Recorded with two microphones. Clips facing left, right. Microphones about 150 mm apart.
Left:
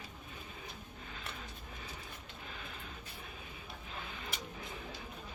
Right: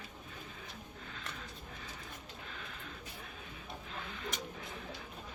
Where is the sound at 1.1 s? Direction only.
10° left (ahead or behind).